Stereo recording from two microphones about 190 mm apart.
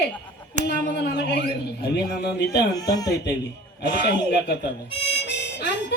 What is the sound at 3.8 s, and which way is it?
Speech, 55° left (ahead or behind).